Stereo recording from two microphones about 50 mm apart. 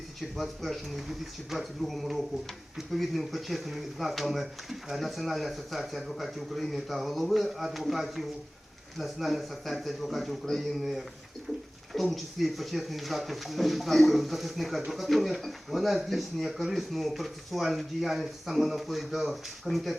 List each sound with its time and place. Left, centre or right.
0.2 s speech: centre
11.9 s speech: centre